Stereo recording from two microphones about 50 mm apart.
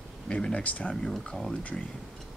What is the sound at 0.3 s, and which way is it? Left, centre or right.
Speech, left.